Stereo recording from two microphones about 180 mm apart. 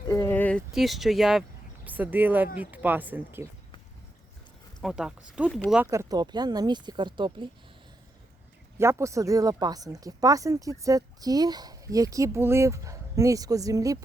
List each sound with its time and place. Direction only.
0.1 s a sound: 10° left (ahead or behind)
0.7 s speech: centre (ahead or behind)
4.8 s speech: 5° right (ahead or behind)
5.7 s speech: 10° right (ahead or behind)
8.8 s speech: 15° right (ahead or behind)